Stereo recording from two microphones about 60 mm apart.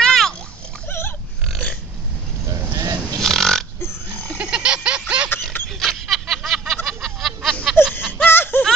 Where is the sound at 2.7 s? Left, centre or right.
Right.